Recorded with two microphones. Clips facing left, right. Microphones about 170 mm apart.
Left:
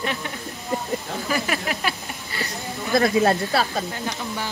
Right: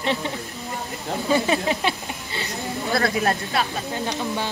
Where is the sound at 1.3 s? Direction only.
25° right (ahead or behind).